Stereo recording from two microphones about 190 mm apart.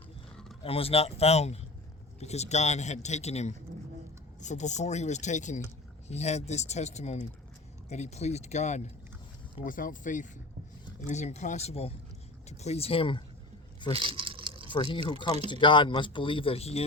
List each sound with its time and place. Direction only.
0.6 s a man's voice: 30° left (ahead or behind)
13.9 s a sound: 30° right (ahead or behind)
14.7 s speech: 25° left (ahead or behind)